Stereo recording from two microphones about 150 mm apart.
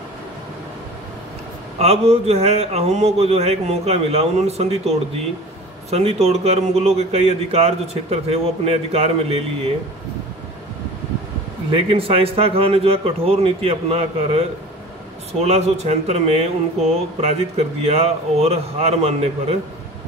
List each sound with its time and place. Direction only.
1.8 s speech: 45° right (ahead or behind)
11.7 s a man's voice: 40° right (ahead or behind)
15.4 s speech: 45° right (ahead or behind)